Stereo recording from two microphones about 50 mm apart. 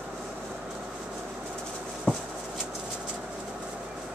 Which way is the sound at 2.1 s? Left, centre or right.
Left.